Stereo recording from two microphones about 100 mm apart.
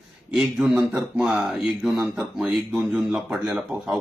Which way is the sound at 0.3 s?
5° right (ahead or behind).